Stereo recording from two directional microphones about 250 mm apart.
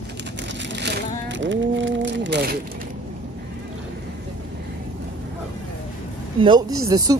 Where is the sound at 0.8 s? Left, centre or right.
Right.